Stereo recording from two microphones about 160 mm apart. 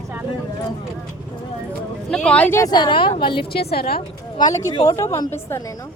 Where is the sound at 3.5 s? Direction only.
75° left (ahead or behind).